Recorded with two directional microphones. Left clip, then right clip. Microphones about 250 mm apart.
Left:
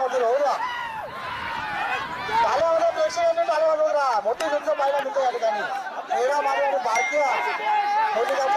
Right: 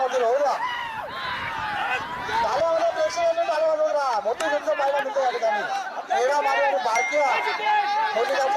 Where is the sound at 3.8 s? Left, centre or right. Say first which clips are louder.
Left 1 dB; centre.